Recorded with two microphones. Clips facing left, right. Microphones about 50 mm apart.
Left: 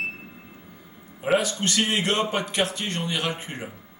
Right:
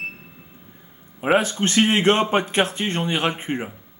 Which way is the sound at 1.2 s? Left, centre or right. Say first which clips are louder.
Right 4 dB; right.